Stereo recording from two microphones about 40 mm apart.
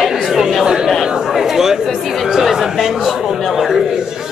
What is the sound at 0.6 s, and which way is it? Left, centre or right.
Chatter, centre.